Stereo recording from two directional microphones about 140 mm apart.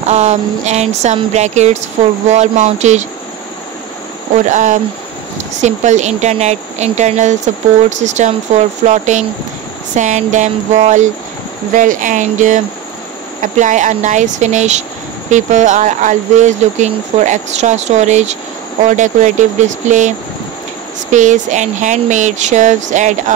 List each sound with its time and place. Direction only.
0.0 s speech: 50° right (ahead or behind)
4.5 s speech: 60° right (ahead or behind)